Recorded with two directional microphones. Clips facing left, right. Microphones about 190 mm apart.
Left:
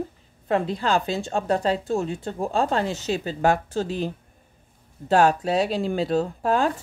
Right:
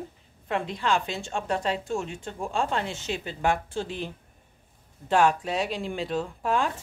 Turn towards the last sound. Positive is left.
turn(degrees=40)  # may be behind; listen again after turning